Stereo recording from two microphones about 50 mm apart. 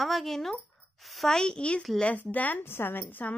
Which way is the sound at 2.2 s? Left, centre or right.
Left.